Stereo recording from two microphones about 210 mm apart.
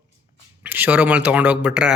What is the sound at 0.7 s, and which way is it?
Speech, 10° right (ahead or behind).